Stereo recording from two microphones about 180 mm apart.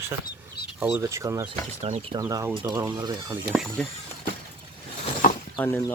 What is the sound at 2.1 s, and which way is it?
Speech, 20° right (ahead or behind).